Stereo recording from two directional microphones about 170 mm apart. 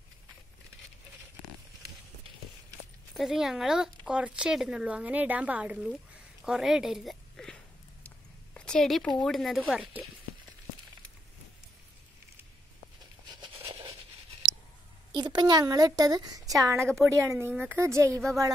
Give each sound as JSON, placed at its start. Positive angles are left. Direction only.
{"t": 3.1, "sound": "speech", "side_deg": -5}
{"t": 8.5, "sound": "speech", "side_deg": 5}
{"t": 13.3, "sound": "a sound", "side_deg": -30}
{"t": 15.1, "sound": "a woman's voice", "side_deg": -25}